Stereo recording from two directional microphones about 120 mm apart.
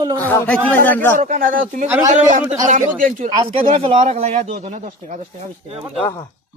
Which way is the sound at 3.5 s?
55° right (ahead or behind).